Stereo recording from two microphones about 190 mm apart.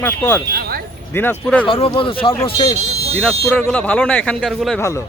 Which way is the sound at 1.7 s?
30° left (ahead or behind).